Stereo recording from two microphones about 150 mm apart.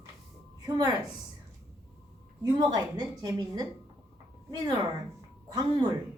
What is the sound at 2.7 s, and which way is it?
A woman's voice, 25° right (ahead or behind).